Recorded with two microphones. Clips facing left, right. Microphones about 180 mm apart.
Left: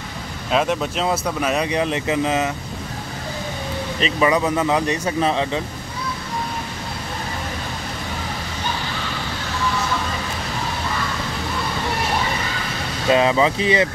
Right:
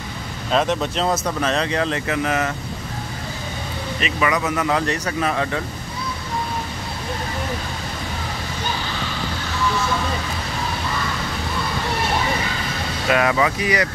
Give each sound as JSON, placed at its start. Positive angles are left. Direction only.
{"t": 0.5, "sound": "speech", "side_deg": 5}
{"t": 4.0, "sound": "speech", "side_deg": 30}
{"t": 13.1, "sound": "speech", "side_deg": 25}